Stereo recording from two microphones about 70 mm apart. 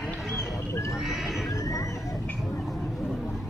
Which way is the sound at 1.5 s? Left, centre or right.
Left.